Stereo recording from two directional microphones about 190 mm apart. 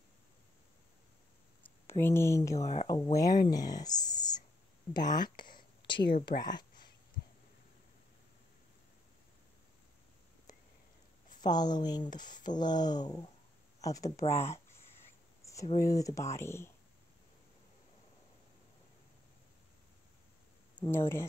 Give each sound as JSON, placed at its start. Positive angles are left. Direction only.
{"t": 1.9, "sound": "speech", "side_deg": 10}
{"t": 2.6, "sound": "speech", "side_deg": 35}
{"t": 2.9, "sound": "speech", "side_deg": 20}
{"t": 6.4, "sound": "a sound", "side_deg": 20}
{"t": 11.4, "sound": "speech", "side_deg": 20}
{"t": 15.4, "sound": "a sound", "side_deg": 15}
{"t": 15.8, "sound": "speech", "side_deg": 20}
{"t": 20.7, "sound": "speech", "side_deg": 10}